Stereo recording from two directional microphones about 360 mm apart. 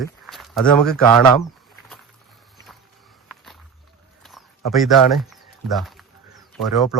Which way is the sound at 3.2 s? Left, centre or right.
Centre.